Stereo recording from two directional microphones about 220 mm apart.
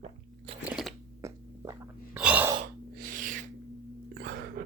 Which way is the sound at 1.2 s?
15° right (ahead or behind).